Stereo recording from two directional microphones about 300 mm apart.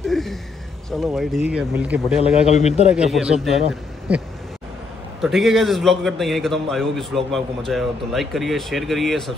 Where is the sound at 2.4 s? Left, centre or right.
Left.